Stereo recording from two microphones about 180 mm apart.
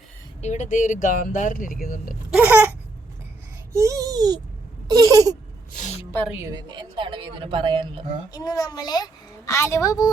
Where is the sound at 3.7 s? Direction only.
15° right (ahead or behind).